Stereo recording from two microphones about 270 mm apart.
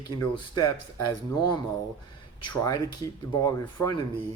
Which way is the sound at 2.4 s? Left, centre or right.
Centre.